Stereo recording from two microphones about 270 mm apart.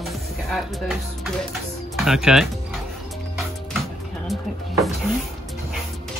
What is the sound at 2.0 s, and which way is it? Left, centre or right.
Speech, centre.